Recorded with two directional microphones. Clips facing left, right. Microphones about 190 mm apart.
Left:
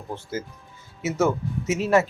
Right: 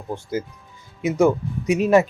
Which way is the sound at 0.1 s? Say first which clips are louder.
Right 5 dB; 15° right (ahead or behind).